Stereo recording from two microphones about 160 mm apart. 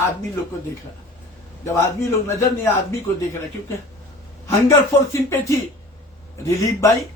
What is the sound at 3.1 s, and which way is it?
Speech, 20° left (ahead or behind).